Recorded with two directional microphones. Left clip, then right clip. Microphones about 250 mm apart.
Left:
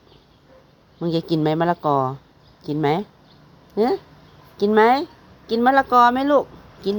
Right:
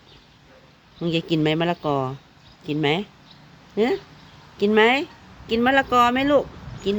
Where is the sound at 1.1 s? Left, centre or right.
Centre.